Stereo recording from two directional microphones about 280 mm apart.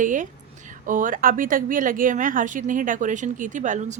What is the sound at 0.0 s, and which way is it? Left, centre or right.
A woman's voice, right.